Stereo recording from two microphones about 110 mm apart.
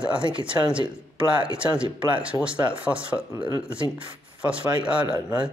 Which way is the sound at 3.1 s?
15° right (ahead or behind).